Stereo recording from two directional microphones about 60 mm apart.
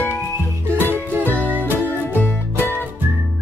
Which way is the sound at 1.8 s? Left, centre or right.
Left.